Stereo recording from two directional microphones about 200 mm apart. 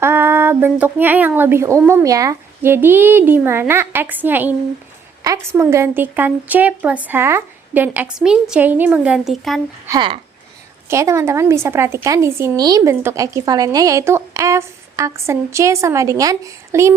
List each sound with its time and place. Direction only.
0.0 s a woman's voice: 10° right (ahead or behind)
9.8 s a woman's voice: 20° right (ahead or behind)